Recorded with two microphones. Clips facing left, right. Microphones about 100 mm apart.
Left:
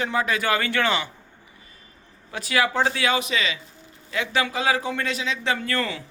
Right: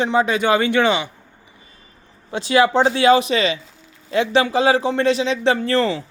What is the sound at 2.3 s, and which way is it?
A man's voice, 25° right (ahead or behind).